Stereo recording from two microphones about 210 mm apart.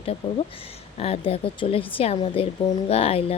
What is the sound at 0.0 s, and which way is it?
Speech, 25° left (ahead or behind).